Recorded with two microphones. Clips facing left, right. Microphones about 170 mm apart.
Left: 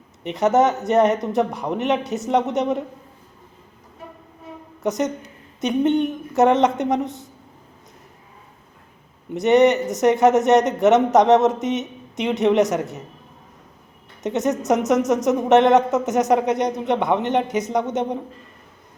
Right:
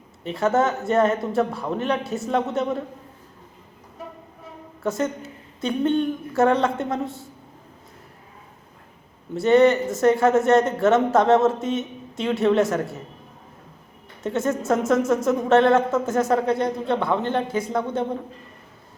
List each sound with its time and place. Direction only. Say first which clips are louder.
0.3 s speech: left 3 dB; 20° left (ahead or behind)
4.8 s speech: left 2 dB; 20° left (ahead or behind)
9.3 s speech: left 1 dB; 20° left (ahead or behind)
14.2 s speech: left 2 dB; 20° left (ahead or behind)